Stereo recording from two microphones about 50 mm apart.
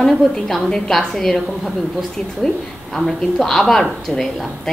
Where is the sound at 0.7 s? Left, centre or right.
Centre.